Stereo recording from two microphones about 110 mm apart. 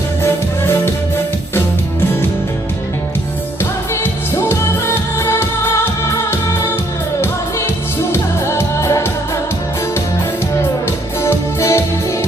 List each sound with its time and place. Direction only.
3.6 s music: 20° left (ahead or behind)
8.1 s music: 25° left (ahead or behind)
10.8 s music: 25° left (ahead or behind)